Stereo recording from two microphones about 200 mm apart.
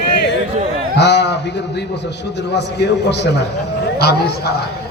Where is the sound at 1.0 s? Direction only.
60° left (ahead or behind).